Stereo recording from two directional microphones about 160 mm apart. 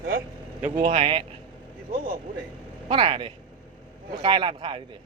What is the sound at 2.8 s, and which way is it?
A man's voice, 35° right (ahead or behind).